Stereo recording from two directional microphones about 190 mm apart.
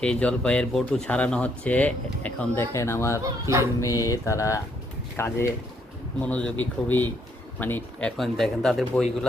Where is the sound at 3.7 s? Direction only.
15° left (ahead or behind); by 9.0 s centre (ahead or behind).